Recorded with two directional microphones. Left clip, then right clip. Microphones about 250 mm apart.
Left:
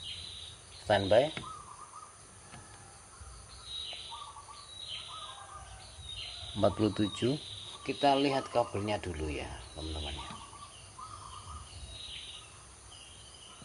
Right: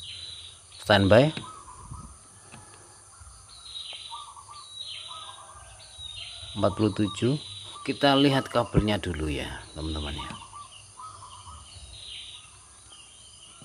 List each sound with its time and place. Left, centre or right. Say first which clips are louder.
0.8 s speech: right 7 dB; right
6.5 s speech: right 4 dB; centre